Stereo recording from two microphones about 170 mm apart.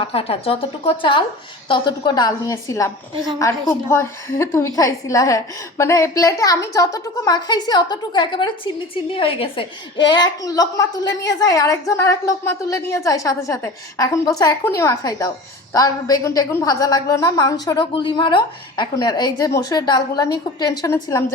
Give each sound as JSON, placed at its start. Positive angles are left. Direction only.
{"t": 0.0, "sound": "a woman's voice", "side_deg": 35}